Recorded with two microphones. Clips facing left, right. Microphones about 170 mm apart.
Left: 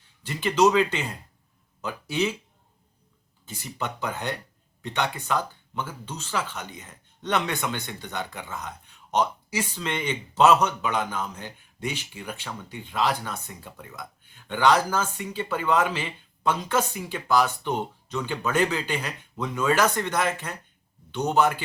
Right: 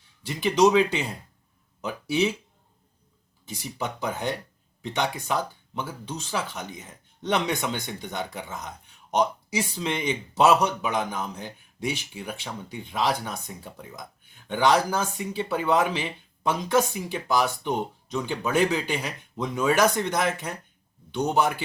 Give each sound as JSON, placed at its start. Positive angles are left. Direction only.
{"t": 0.3, "sound": "speech", "side_deg": -15}
{"t": 4.0, "sound": "speech", "side_deg": -15}